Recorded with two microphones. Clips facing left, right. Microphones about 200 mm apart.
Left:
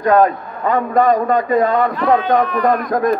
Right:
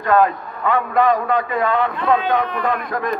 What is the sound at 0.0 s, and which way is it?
A man's voice, 40° left (ahead or behind).